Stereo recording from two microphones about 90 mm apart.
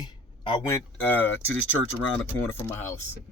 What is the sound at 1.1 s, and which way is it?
Speech, 20° left (ahead or behind).